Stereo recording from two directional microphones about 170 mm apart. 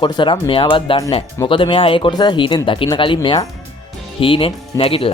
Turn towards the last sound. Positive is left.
turn(degrees=35)  # may be behind; listen again after turning